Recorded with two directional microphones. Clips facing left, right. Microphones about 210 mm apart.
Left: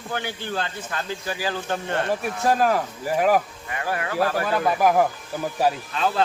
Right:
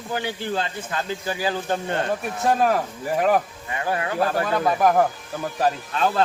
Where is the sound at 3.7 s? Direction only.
25° right (ahead or behind).